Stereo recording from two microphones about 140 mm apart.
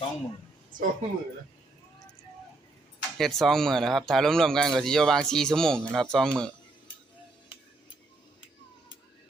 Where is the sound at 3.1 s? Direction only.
Centre (ahead or behind).